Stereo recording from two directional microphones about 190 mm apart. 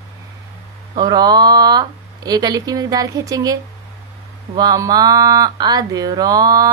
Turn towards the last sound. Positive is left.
turn(degrees=-20)  # may be behind; listen again after turning